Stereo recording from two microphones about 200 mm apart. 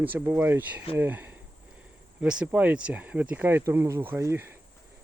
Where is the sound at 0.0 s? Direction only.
10° right (ahead or behind).